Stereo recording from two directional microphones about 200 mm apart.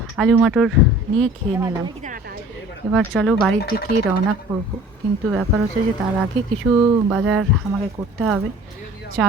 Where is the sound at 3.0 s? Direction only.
5° left (ahead or behind).